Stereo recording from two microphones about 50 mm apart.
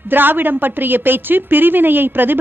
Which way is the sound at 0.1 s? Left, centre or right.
Right.